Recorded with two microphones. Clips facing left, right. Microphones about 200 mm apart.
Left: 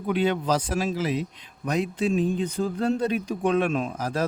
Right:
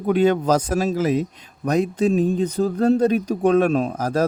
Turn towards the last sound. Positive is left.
turn(degrees=-40)  # may be behind; listen again after turning